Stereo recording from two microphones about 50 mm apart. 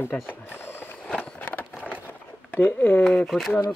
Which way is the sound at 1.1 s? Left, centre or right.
Left.